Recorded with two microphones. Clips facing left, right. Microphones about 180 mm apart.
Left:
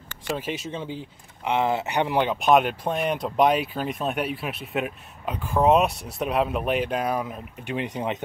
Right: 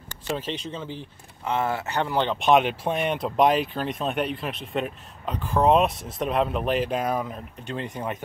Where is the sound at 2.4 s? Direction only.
Centre (ahead or behind).